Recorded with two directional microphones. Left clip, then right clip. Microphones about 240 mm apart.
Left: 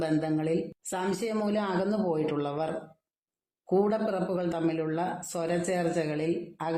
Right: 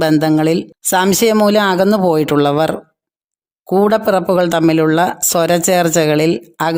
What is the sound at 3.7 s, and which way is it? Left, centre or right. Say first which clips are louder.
A man's voice: right 15 dB; right.